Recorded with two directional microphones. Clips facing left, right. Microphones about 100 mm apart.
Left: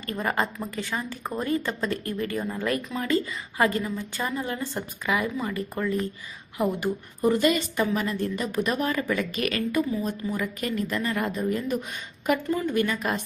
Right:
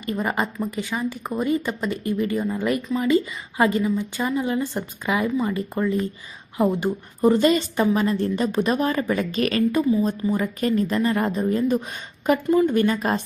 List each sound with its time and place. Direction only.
0.0 s a woman's voice: 15° right (ahead or behind)